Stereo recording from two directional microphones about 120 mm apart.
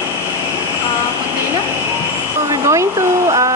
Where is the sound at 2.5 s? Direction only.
25° right (ahead or behind).